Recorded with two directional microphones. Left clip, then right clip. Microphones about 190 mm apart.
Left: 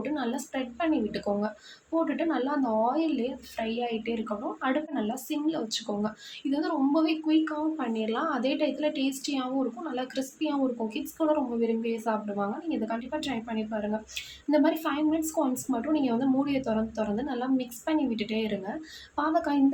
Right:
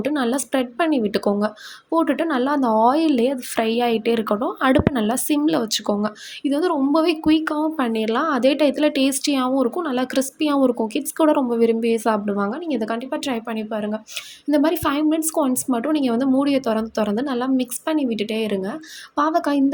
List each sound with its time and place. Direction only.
0.0 s a woman's voice: 40° right (ahead or behind)